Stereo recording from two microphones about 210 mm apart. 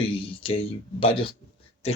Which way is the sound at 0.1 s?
25° left (ahead or behind).